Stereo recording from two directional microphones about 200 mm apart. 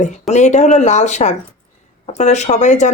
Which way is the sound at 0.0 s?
35° left (ahead or behind).